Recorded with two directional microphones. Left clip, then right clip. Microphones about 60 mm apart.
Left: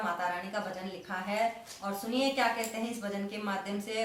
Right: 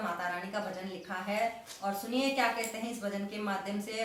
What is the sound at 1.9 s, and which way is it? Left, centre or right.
A woman's voice, left.